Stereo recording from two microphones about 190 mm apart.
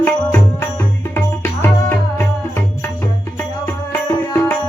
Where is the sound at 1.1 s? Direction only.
10° left (ahead or behind).